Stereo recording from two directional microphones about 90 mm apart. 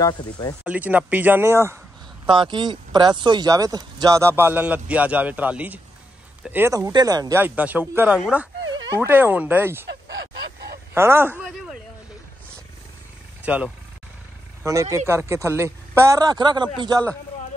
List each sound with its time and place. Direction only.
0.0 s speech: 45° left (ahead or behind)
0.7 s speech: 15° right (ahead or behind)
2.4 s speech: 65° right (ahead or behind); by 4.2 s 45° right (ahead or behind)
4.2 s a man's voice: 25° right (ahead or behind); by 6.6 s 10° right (ahead or behind)
6.9 s speech: 50° right (ahead or behind)
7.3 s a man's voice: 20° right (ahead or behind)
9.0 s speech: 20° right (ahead or behind)
11.0 s speech: 25° right (ahead or behind)
11.3 s a sound: 10° right (ahead or behind)
13.5 s a man's voice: 15° right (ahead or behind)
14.6 s speech: 35° right (ahead or behind)
16.2 s speech: 50° right (ahead or behind)